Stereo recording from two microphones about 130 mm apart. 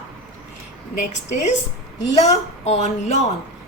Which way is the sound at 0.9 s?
65° left (ahead or behind).